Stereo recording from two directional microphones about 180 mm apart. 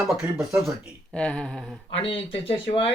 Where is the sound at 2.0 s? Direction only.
30° left (ahead or behind).